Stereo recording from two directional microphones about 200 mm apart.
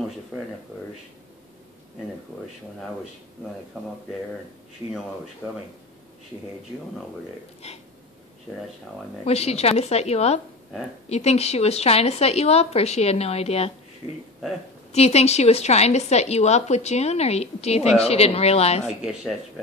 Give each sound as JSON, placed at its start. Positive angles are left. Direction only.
{"t": 5.4, "sound": "speech", "side_deg": -10}
{"t": 7.6, "sound": "a woman's voice", "side_deg": 30}
{"t": 9.2, "sound": "a woman's voice", "side_deg": 30}
{"t": 14.9, "sound": "a woman's voice", "side_deg": 30}
{"t": 18.9, "sound": "speech", "side_deg": -5}